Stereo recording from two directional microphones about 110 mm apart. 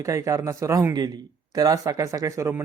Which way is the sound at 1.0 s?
35° right (ahead or behind).